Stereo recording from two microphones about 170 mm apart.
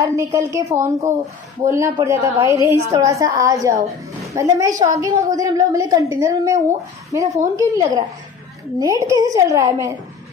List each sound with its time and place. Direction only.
0.0 s a woman's voice: 15° right (ahead or behind)